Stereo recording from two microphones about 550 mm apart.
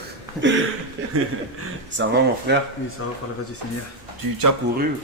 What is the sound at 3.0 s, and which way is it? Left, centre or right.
Speech, left.